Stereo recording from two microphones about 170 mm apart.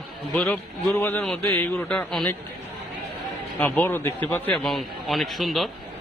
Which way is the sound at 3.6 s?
10° left (ahead or behind).